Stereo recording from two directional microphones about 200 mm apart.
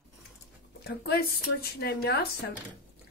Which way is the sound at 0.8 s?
50° left (ahead or behind).